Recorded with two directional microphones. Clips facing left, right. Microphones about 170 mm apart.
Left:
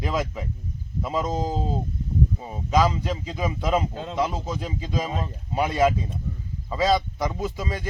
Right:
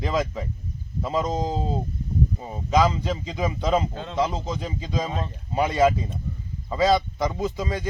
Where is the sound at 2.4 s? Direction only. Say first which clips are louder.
Right 1 dB; 5° left (ahead or behind).